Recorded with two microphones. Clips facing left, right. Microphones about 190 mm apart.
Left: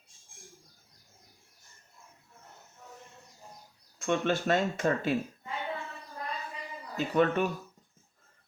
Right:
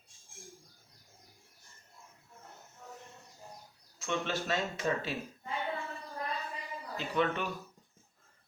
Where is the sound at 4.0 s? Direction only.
55° left (ahead or behind).